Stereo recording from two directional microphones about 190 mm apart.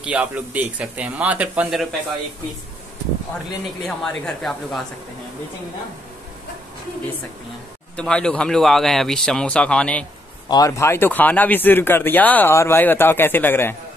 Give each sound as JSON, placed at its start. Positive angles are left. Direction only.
{"t": 0.0, "sound": "speech", "side_deg": -10}
{"t": 3.8, "sound": "speech", "side_deg": 5}
{"t": 7.9, "sound": "speech", "side_deg": 5}
{"t": 10.5, "sound": "speech", "side_deg": 15}